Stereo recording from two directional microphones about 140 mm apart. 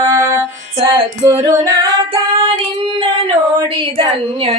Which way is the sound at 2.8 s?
40° right (ahead or behind).